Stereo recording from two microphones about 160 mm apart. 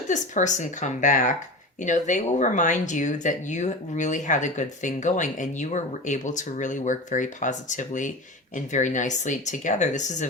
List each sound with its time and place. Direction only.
0.1 s speech: 50° left (ahead or behind)